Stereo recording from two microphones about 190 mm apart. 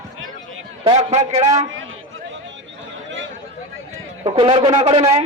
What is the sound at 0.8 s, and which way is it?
Speech, 35° right (ahead or behind).